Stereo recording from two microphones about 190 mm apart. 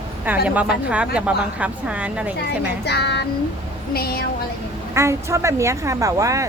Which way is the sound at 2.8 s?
60° left (ahead or behind).